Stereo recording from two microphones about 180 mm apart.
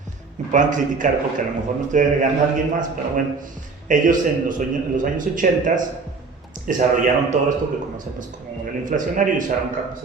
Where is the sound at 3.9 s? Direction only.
45° right (ahead or behind).